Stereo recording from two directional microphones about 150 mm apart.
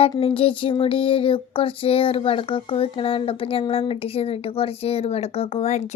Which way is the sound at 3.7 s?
40° left (ahead or behind).